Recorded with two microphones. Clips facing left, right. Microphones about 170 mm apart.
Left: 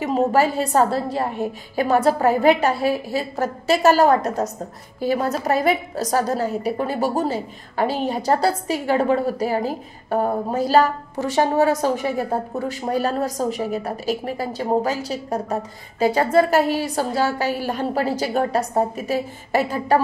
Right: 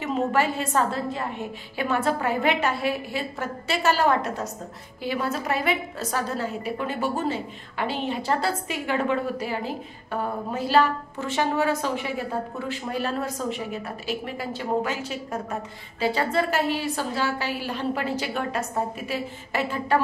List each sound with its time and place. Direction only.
0.0 s a woman's voice: 40° left (ahead or behind)